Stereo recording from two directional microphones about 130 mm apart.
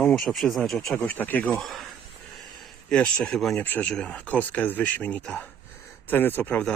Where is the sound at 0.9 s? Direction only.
15° left (ahead or behind).